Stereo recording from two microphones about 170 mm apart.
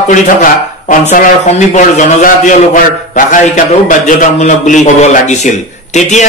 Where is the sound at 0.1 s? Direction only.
50° left (ahead or behind).